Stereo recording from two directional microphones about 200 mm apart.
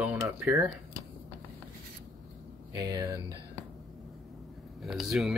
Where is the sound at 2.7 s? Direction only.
20° right (ahead or behind).